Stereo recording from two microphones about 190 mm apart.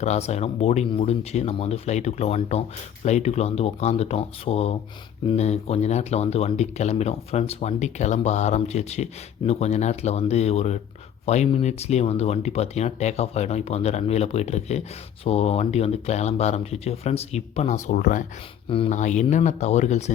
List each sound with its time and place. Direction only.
0.0 s speech: 35° left (ahead or behind)